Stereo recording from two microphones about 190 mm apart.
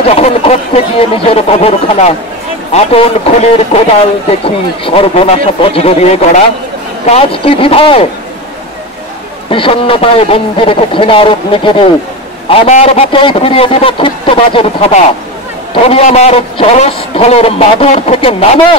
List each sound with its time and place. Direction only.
0.1 s a man's voice: 35° left (ahead or behind)
9.5 s a man's voice: 30° left (ahead or behind)
15.9 s a man's voice: 35° left (ahead or behind)